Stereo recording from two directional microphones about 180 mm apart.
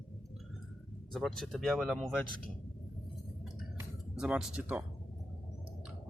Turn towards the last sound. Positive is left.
turn(degrees=-10)  # may be behind; listen again after turning